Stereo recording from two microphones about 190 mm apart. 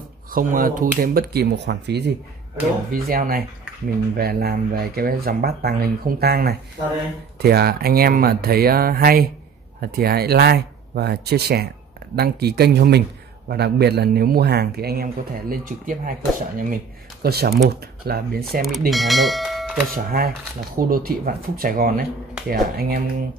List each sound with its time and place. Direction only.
0.3 s speech: 45° right (ahead or behind)
2.9 s a man's voice: 50° right (ahead or behind)
18.9 s speech: centre (ahead or behind)
19.9 s speech: 50° right (ahead or behind)